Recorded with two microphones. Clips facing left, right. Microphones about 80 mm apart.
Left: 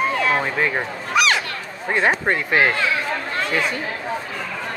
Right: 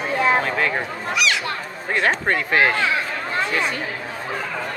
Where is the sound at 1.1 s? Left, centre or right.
Left.